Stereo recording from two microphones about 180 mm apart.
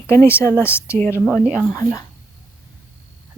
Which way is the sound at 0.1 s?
15° left (ahead or behind).